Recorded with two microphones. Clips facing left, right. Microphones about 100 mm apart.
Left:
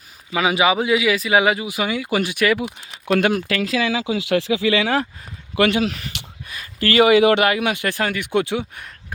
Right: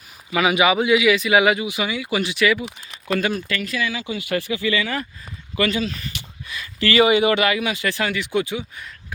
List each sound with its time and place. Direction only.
0.3 s a man's voice: 30° left (ahead or behind); by 2.6 s 50° left (ahead or behind)
3.1 s speech: 75° left (ahead or behind)
5.5 s speech: 70° left (ahead or behind)
6.5 s a sound: 45° left (ahead or behind)
7.1 s speech: 75° left (ahead or behind)
7.4 s speech: 55° left (ahead or behind)